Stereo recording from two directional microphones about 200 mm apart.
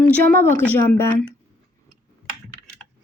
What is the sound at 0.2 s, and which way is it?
Speech, 45° right (ahead or behind).